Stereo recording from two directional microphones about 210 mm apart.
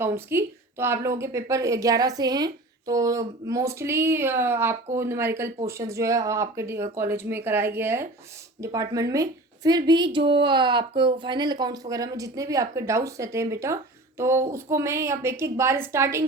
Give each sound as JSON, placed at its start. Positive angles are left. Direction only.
{"t": 0.0, "sound": "a woman's voice", "side_deg": -10}